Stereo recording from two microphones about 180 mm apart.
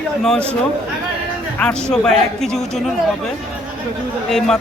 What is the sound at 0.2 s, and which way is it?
Speech, 5° left (ahead or behind).